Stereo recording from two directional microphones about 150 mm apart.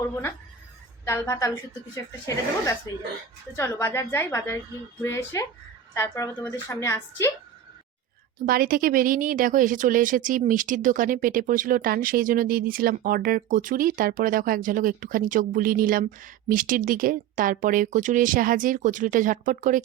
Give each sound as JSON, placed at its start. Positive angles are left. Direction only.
{"t": 1.0, "sound": "a woman's voice", "side_deg": 20}
{"t": 8.4, "sound": "speech", "side_deg": -70}